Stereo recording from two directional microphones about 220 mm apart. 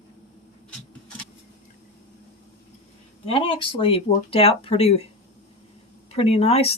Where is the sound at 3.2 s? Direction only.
25° left (ahead or behind).